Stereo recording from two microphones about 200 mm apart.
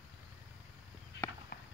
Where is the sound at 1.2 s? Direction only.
60° left (ahead or behind).